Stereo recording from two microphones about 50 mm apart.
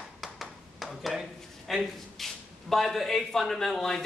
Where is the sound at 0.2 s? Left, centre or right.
Centre.